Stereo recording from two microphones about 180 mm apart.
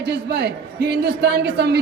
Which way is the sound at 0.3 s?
70° right (ahead or behind).